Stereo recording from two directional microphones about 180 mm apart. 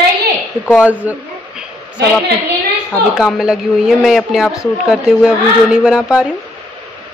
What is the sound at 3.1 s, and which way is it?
A woman's voice, 5° right (ahead or behind).